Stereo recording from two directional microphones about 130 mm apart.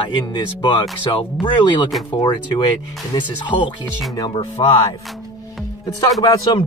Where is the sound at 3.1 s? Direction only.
35° left (ahead or behind).